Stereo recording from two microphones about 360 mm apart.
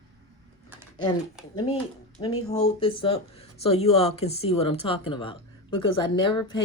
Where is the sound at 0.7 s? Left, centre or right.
Centre.